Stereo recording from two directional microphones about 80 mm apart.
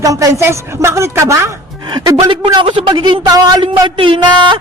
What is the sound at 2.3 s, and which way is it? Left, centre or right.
Speech, right.